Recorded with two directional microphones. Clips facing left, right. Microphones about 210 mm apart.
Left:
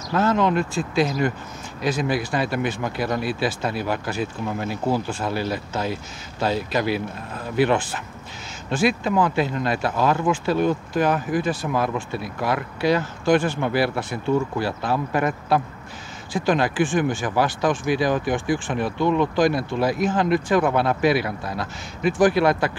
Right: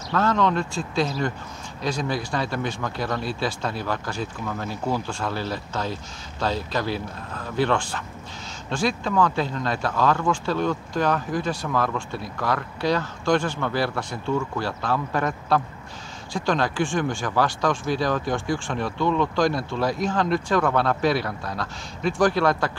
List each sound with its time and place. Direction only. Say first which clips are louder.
0.2 s a man's voice: left 2 dB; 5° left (ahead or behind)
17.6 s a man's voice: left 3 dB; 15° left (ahead or behind)